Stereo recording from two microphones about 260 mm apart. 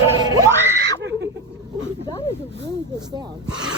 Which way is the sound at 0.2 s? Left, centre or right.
Centre.